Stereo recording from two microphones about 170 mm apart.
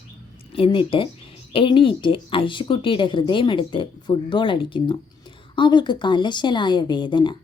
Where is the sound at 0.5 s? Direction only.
30° left (ahead or behind).